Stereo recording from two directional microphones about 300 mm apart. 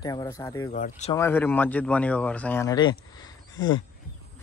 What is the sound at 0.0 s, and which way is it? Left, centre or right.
Speech, centre.